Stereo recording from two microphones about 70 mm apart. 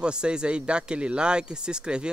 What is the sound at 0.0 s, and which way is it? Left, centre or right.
Speech, centre.